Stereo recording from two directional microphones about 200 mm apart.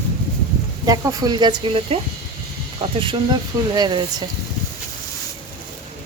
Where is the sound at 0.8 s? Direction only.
20° right (ahead or behind).